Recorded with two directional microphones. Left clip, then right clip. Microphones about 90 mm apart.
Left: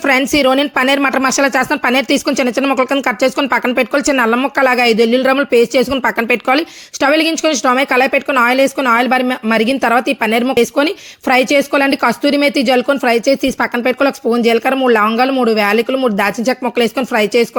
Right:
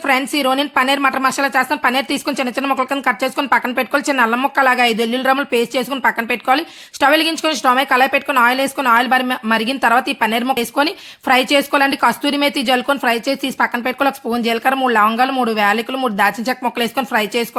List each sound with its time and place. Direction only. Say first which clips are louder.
0.0 s a woman's voice: left 4 dB; 55° left (ahead or behind)
6.0 s speech: left 3 dB; 60° left (ahead or behind); by 17.5 s 30° left (ahead or behind)